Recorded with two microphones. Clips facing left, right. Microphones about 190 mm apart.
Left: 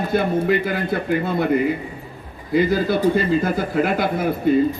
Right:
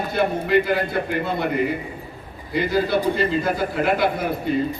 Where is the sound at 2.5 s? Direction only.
50° left (ahead or behind).